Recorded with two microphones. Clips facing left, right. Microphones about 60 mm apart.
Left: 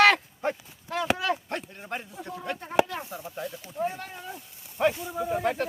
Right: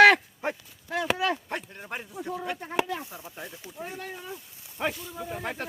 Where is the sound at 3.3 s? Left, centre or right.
Centre.